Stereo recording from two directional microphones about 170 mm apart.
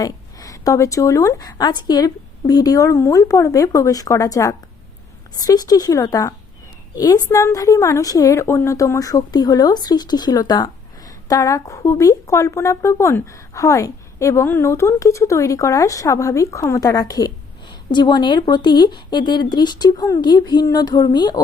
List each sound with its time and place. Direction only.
0.0 s speech: 20° left (ahead or behind)